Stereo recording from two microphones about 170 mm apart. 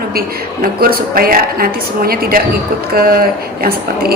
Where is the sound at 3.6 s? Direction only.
65° right (ahead or behind).